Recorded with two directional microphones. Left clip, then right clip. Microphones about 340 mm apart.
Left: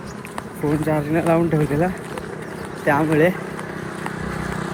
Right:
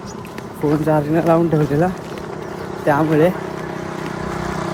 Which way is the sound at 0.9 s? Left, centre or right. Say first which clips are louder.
Right 4 dB; centre.